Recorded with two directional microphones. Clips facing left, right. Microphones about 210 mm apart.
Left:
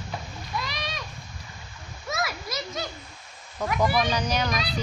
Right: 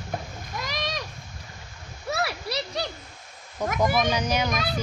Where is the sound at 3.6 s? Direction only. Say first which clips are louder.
Right 1 dB; 10° right (ahead or behind).